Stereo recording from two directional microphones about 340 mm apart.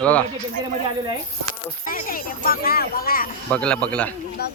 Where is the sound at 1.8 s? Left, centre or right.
Left.